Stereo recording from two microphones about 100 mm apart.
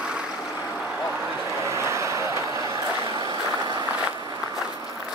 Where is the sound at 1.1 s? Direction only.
30° right (ahead or behind).